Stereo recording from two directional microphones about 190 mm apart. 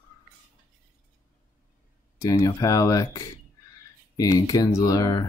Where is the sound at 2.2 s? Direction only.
15° left (ahead or behind).